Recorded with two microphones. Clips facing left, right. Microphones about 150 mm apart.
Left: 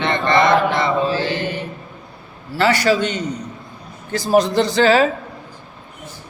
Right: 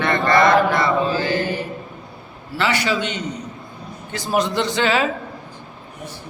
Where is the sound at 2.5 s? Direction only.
40° left (ahead or behind).